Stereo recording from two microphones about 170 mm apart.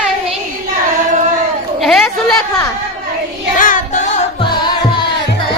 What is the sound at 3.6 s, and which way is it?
Child singing, 50° left (ahead or behind).